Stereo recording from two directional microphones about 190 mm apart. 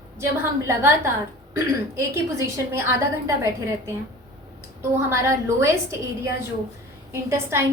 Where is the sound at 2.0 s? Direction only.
15° right (ahead or behind).